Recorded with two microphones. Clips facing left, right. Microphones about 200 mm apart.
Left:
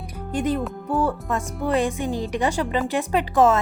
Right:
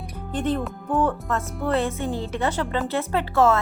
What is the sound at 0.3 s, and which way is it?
Music, 10° left (ahead or behind).